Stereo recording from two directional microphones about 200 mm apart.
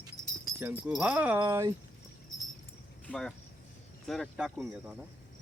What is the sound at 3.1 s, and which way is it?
Speech, 5° left (ahead or behind).